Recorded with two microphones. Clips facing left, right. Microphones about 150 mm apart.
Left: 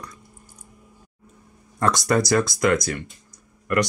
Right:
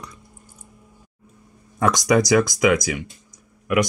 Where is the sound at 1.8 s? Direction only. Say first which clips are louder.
Right 3 dB; 5° right (ahead or behind).